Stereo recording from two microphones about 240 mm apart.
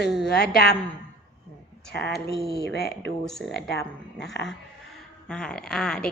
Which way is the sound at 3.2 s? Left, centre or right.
Centre.